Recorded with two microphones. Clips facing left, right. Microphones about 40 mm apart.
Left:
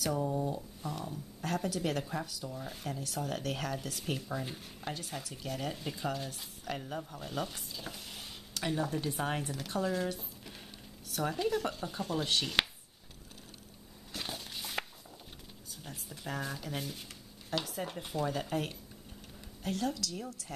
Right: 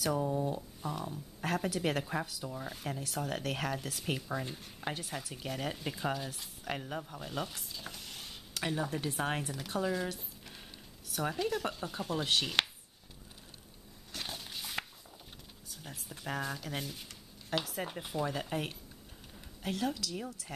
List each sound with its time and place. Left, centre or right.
0.0 s speech: centre
1.4 s speech: right
2.6 s speech: centre
3.1 s speech: centre
6.1 s speech: centre
8.7 s speech: centre
9.4 s speech: centre
11.3 s speech: centre
14.1 s a sound: centre
15.8 s a woman's voice: centre